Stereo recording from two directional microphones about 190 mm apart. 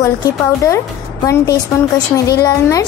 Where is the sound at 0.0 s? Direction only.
15° left (ahead or behind).